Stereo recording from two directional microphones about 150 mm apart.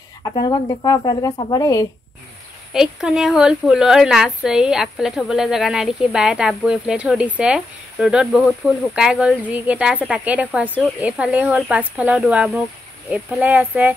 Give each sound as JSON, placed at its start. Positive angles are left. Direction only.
{"t": 0.3, "sound": "speech", "side_deg": 30}
{"t": 2.7, "sound": "a woman's voice", "side_deg": -5}